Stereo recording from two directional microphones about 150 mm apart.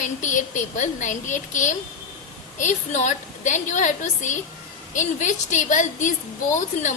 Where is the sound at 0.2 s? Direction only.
55° left (ahead or behind).